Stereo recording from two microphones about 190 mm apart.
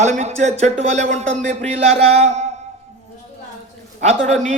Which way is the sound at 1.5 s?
35° right (ahead or behind).